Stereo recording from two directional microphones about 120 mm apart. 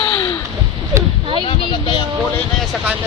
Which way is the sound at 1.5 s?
45° left (ahead or behind).